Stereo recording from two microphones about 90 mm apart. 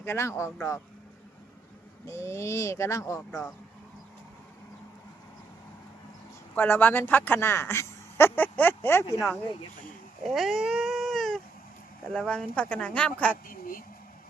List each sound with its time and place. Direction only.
0.0 s speech: 30° left (ahead or behind)
2.0 s speech: 30° left (ahead or behind)
3.2 s speech: 10° left (ahead or behind)
6.6 s speech: 20° left (ahead or behind)
10.2 s cat: centre (ahead or behind)
12.0 s speech: 10° left (ahead or behind)